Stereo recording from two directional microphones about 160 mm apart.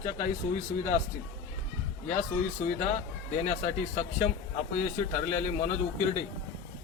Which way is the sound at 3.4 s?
45° left (ahead or behind).